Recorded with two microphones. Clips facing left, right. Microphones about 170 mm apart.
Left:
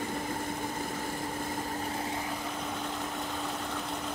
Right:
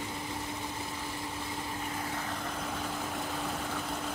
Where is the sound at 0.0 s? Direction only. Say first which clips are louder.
Left 4 dB; 50° left (ahead or behind).